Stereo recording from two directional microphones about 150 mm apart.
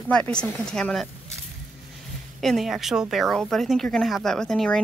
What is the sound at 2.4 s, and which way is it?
Speech, centre (ahead or behind).